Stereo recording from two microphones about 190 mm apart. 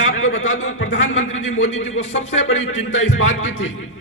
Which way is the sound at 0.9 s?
80° left.